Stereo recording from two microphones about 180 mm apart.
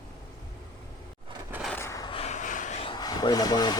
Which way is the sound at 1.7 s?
15° left (ahead or behind).